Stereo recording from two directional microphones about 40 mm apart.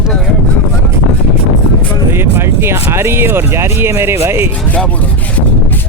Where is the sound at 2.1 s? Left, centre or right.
Right.